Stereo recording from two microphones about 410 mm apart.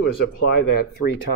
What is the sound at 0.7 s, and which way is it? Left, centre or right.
Speech, left.